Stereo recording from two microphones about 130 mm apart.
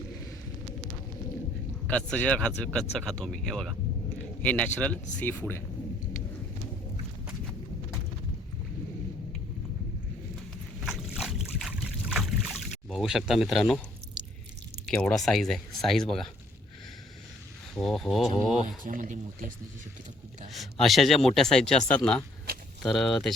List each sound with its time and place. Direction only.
1.9 s speech: 10° left (ahead or behind)
11.1 s a sound: 5° right (ahead or behind)
14.8 s speech: 5° left (ahead or behind)
17.7 s speech: 5° left (ahead or behind)
18.9 s speech: 90° right
20.5 s speech: centre (ahead or behind)